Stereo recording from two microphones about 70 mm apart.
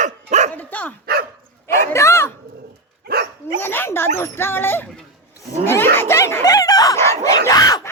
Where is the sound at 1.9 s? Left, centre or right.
Left.